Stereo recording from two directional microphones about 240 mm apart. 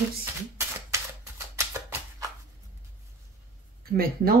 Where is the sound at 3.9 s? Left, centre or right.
Right.